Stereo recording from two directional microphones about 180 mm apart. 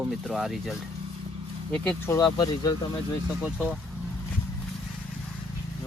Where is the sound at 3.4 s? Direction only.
5° right (ahead or behind).